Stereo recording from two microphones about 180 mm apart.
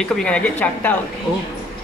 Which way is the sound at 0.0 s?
5° left (ahead or behind).